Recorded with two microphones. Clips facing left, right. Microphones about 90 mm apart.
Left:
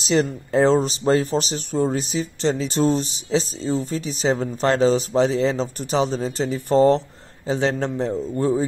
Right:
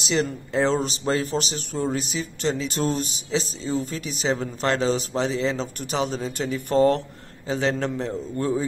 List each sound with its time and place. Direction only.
0.0 s speech: 35° left (ahead or behind)